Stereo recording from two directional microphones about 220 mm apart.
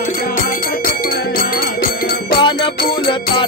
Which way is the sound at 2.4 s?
20° left (ahead or behind).